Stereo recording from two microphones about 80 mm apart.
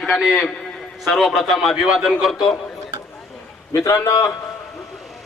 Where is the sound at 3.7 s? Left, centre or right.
Left.